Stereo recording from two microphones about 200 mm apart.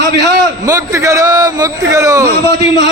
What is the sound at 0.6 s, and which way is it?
A man's voice, 15° right (ahead or behind).